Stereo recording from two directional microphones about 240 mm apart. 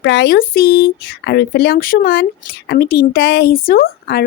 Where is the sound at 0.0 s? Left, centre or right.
Left.